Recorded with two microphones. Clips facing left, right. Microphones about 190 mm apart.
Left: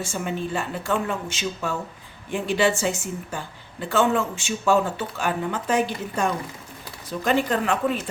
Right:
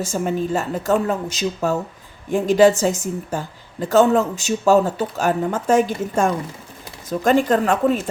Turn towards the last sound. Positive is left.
turn(degrees=-45)  # may be behind; listen again after turning